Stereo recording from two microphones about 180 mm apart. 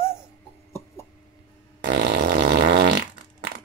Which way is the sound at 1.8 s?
65° right (ahead or behind).